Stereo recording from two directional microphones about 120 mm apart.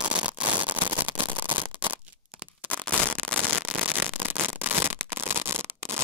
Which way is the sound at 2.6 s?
15° right (ahead or behind).